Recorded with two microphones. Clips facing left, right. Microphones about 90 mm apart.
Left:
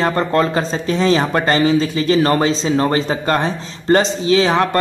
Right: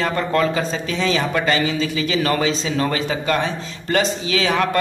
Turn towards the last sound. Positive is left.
turn(degrees=25)  # may be behind; listen again after turning